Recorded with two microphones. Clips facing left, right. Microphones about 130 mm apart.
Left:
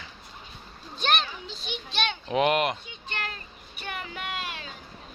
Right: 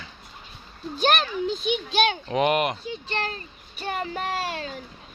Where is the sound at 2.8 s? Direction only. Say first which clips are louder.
Right 7 dB; 35° right (ahead or behind).